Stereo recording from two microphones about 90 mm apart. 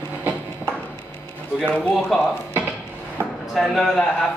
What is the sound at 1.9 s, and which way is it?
Speech, centre (ahead or behind).